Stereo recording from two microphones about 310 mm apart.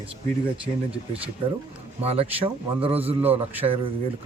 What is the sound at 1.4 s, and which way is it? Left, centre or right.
Speech, centre.